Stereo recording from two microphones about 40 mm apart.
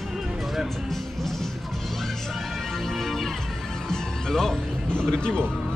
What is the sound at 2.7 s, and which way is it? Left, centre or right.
Music, centre.